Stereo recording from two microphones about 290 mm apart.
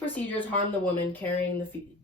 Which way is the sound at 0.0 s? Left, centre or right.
Centre.